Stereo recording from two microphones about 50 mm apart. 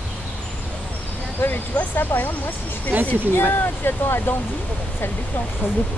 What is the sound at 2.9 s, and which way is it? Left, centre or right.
Speech, right.